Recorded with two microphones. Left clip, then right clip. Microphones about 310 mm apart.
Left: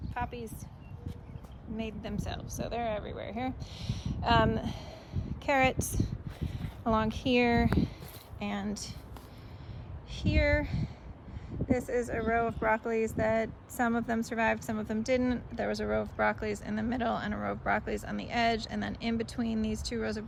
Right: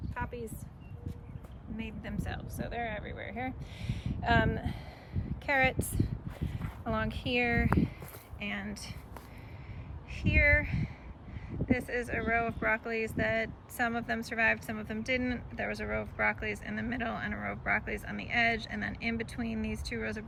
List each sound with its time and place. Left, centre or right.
0.1 s a sound: centre
1.7 s speech: centre
3.0 s speech: left
3.2 s speech: centre
10.1 s speech: centre
11.9 s speech: centre
19.5 s speech: left
20.0 s speech: centre